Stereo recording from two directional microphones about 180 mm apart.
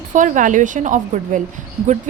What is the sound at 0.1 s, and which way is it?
A woman's voice, 45° right (ahead or behind).